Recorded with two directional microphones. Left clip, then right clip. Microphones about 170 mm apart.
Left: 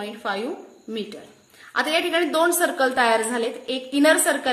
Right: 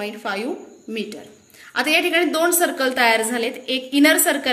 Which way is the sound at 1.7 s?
55° left (ahead or behind).